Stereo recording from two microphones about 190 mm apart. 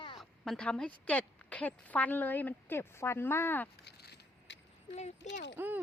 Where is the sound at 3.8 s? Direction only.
60° left (ahead or behind).